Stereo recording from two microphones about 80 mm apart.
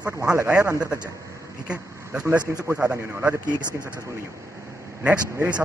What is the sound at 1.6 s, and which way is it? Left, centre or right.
Speech, centre.